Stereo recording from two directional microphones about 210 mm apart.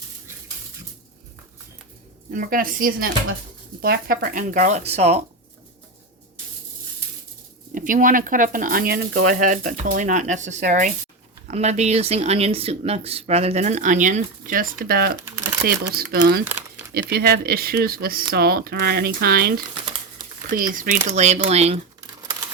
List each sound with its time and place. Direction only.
2.3 s speech: 40° right (ahead or behind)
7.7 s speech: 40° right (ahead or behind)
15.4 s a sound: 15° right (ahead or behind)
15.6 s speech: 45° right (ahead or behind)
20.7 s speech: 40° right (ahead or behind)